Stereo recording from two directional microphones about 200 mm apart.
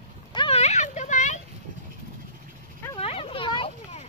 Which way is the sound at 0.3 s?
25° left (ahead or behind).